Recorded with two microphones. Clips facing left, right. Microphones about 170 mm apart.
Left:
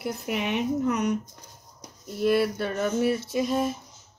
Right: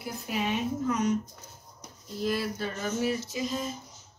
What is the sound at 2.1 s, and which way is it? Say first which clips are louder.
Speech: left 7 dB; 60° left (ahead or behind).